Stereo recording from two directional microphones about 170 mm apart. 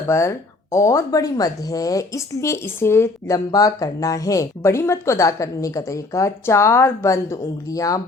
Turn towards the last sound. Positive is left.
turn(degrees=20)  # may be behind; listen again after turning